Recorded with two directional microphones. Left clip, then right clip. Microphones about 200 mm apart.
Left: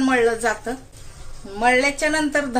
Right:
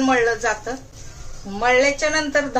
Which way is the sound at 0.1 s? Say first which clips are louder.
Even; 50° left (ahead or behind).